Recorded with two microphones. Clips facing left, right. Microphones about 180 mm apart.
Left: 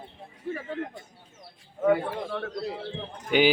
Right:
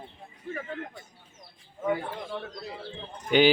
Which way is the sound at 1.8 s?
70° left (ahead or behind).